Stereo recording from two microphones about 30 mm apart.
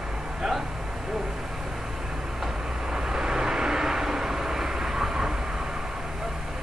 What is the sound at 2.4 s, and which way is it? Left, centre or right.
Vehicle, right.